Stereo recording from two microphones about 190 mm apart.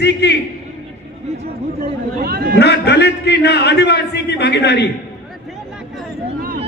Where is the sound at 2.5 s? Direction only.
60° left (ahead or behind).